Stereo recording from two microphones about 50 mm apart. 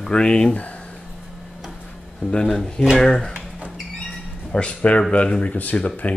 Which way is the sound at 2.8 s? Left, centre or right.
Centre.